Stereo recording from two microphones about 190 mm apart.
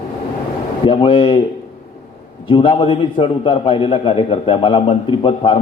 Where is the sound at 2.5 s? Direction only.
25° left (ahead or behind).